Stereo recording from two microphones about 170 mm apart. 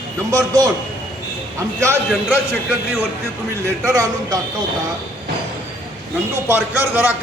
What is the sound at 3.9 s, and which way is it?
Speech, 20° right (ahead or behind).